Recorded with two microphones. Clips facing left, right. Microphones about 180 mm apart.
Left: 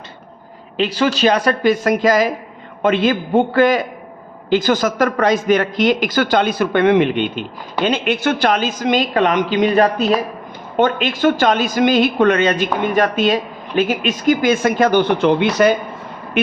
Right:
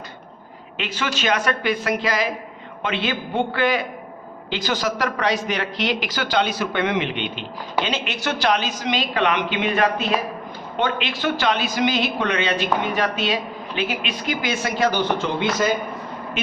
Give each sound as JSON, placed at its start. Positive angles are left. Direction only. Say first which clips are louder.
{"t": 0.8, "sound": "a woman's voice", "louder": "left 10 dB", "side_deg": 35}